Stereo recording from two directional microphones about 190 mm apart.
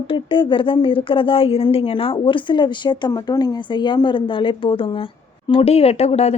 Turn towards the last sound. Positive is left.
turn(degrees=35)  # may be behind; listen again after turning